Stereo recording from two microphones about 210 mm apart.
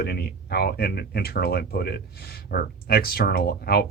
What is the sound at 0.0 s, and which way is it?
Speech, 50° left (ahead or behind).